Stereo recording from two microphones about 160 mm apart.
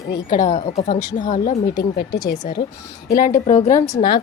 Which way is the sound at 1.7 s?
65° left (ahead or behind).